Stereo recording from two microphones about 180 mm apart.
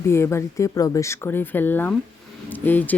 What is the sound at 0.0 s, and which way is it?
Speech, 15° left (ahead or behind).